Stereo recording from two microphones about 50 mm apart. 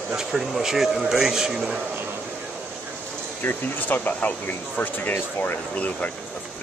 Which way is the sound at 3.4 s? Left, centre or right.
Left.